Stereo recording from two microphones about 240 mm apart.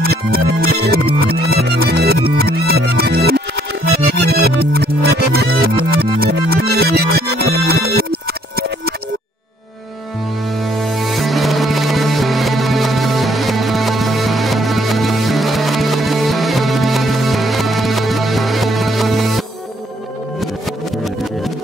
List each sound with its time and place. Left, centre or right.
0.0 s music: right
10.6 s music: centre